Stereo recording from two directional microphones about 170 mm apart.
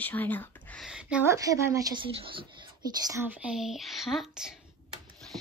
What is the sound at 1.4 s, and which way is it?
Speech, 20° right (ahead or behind).